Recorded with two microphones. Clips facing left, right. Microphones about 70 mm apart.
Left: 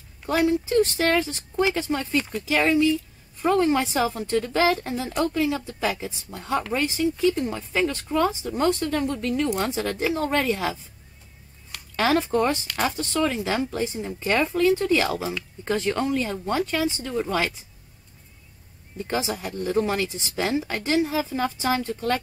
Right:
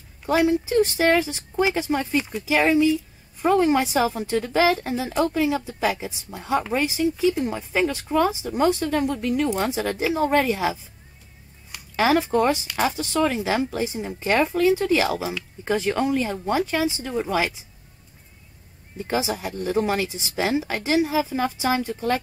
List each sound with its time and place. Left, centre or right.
0.3 s a woman's voice: centre
18.9 s a woman's voice: centre